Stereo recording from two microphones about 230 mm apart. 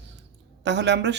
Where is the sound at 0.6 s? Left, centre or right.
Right.